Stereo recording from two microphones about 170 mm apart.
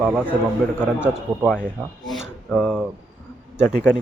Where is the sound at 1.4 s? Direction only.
5° left (ahead or behind).